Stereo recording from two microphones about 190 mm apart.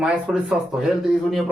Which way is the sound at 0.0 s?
5° right (ahead or behind).